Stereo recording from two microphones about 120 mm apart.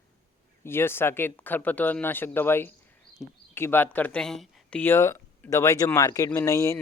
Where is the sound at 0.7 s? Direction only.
20° left (ahead or behind).